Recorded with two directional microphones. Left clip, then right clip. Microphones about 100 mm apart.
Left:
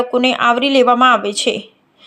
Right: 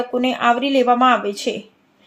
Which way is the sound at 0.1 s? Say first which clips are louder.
Left 2 dB; 40° left (ahead or behind).